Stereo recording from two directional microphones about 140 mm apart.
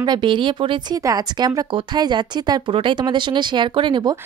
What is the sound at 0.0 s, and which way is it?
Speech, 35° right (ahead or behind).